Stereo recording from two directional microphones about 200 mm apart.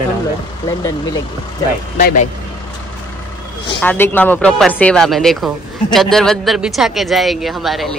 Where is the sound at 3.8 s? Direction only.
10° left (ahead or behind).